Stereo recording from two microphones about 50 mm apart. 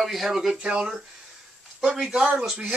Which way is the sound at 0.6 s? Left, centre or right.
Centre.